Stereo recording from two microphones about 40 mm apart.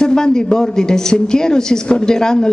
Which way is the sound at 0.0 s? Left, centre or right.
Centre.